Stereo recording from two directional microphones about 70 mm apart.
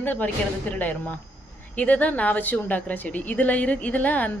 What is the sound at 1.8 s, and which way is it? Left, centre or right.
A woman's voice, left.